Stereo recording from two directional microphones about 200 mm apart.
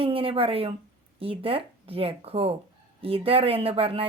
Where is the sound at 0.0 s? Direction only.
25° right (ahead or behind).